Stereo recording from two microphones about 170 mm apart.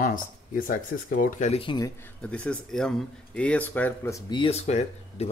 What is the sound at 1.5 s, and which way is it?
Speech, 30° left (ahead or behind).